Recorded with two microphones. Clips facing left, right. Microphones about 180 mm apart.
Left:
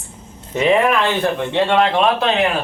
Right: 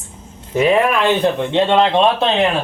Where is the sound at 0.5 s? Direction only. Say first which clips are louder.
Right 1 dB; 5° right (ahead or behind).